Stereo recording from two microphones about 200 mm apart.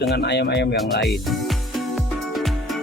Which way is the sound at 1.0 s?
Centre (ahead or behind).